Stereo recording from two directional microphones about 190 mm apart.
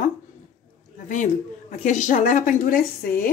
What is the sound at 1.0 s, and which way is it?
A woman's voice, 40° left (ahead or behind).